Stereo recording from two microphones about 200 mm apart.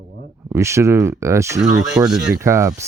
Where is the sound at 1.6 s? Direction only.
5° right (ahead or behind).